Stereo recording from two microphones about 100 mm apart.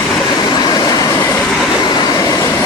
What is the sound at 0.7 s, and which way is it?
Train, 40° left (ahead or behind).